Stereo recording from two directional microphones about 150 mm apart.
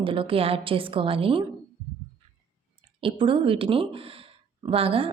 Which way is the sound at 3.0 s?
35° right (ahead or behind).